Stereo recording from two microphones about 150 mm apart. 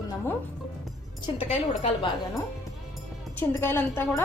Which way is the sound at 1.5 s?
40° left (ahead or behind).